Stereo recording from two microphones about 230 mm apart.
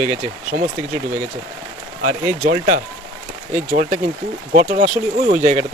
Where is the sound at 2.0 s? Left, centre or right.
Right.